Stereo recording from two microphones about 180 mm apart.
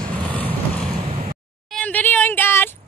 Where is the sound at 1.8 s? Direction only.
10° left (ahead or behind).